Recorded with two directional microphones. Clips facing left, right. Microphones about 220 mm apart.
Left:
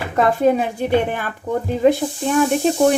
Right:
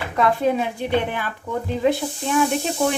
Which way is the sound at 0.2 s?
45° left (ahead or behind).